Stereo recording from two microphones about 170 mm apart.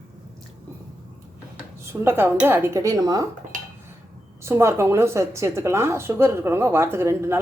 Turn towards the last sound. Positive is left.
turn(degrees=-15)  # may be behind; listen again after turning